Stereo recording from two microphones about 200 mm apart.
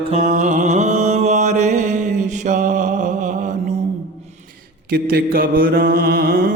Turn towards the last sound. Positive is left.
turn(degrees=-45)  # may be behind; listen again after turning